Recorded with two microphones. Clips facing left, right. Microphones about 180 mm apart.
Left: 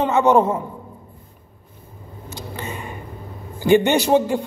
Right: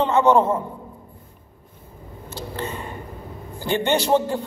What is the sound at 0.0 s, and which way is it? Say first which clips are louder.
Speech: left 1 dB; 15° left (ahead or behind).